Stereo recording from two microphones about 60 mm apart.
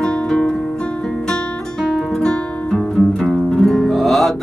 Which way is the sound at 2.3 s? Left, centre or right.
Centre.